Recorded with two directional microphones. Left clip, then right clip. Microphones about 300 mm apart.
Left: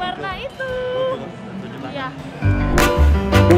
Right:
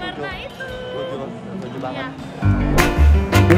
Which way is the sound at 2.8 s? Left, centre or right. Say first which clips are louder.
Left 3 dB; centre.